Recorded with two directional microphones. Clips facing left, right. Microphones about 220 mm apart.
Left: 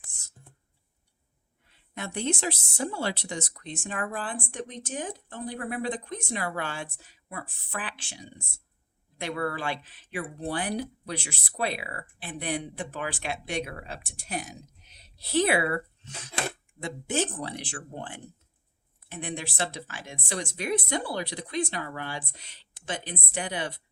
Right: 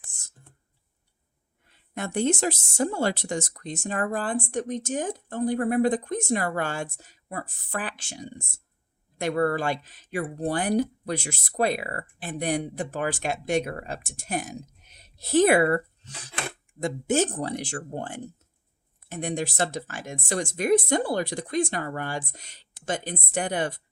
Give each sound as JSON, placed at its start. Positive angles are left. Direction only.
{"t": 2.0, "sound": "speech", "side_deg": -45}